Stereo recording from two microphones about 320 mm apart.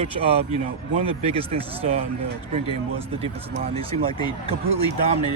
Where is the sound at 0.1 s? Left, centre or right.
Right.